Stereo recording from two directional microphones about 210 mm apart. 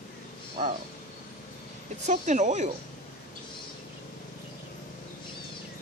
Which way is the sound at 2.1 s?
35° right (ahead or behind).